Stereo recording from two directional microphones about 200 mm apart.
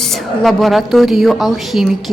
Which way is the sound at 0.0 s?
Centre (ahead or behind).